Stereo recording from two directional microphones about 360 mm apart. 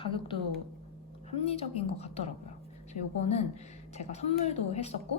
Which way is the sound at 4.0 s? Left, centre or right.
Centre.